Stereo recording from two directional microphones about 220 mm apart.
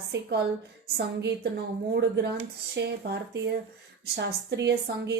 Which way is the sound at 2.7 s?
50° right (ahead or behind).